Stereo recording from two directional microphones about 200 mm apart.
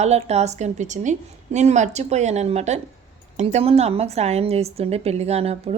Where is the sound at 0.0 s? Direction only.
35° right (ahead or behind).